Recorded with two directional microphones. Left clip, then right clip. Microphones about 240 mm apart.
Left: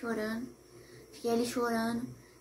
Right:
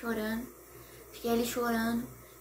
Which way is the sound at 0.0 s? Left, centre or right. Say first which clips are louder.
Right 1 dB; centre.